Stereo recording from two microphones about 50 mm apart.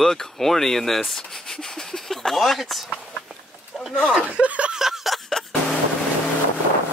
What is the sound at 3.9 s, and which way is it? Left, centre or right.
Speech, centre.